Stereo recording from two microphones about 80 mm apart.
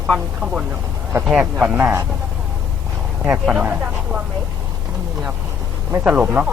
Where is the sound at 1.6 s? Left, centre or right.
Right.